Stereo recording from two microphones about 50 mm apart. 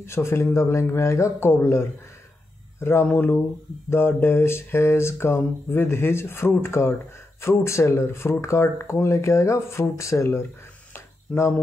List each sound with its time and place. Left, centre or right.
0.0 s speech: left
3.2 s speech: left
6.6 s speech: left
11.3 s speech: left